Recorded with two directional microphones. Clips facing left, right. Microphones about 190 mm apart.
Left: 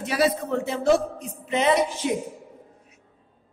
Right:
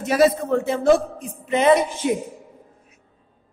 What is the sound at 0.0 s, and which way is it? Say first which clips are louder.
A woman's voice: right 5 dB; 45° right (ahead or behind).